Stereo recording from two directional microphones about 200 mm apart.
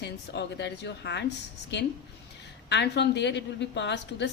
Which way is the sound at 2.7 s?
60° left (ahead or behind).